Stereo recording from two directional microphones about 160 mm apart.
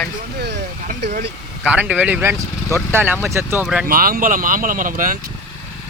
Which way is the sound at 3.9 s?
65° right (ahead or behind).